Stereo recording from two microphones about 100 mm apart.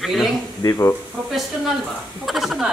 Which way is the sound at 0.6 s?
30° left (ahead or behind).